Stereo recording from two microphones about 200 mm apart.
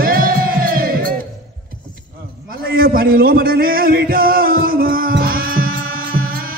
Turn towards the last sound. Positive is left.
turn(degrees=-45)  # may be behind; listen again after turning